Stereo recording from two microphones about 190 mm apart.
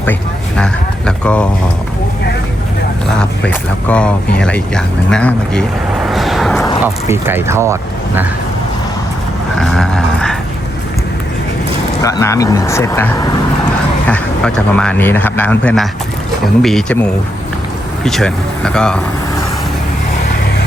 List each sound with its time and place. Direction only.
0.0 s speech: 5° left (ahead or behind)
3.2 s speech: 5° left (ahead or behind)
6.8 s speech: 10° right (ahead or behind)
9.6 s dog: centre (ahead or behind)
12.0 s speech: 15° left (ahead or behind)
18.0 s speech: 5° left (ahead or behind)